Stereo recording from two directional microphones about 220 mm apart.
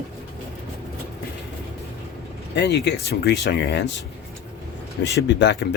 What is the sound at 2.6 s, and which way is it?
Speech, 50° left (ahead or behind).